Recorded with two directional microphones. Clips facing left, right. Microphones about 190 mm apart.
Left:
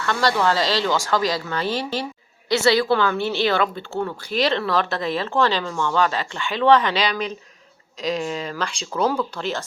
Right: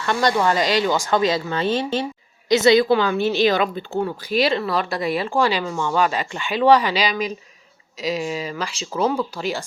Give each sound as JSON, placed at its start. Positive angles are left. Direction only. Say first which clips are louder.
{"t": 0.0, "sound": "a woman's voice", "louder": "right 1 dB", "side_deg": -20}